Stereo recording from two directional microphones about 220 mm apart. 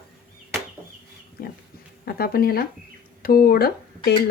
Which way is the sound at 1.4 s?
40° left (ahead or behind).